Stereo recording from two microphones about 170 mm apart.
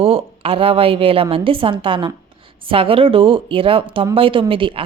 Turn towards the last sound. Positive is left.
turn(degrees=-30)  # may be behind; listen again after turning